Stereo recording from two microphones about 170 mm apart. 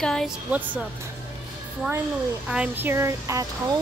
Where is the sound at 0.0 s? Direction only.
5° left (ahead or behind).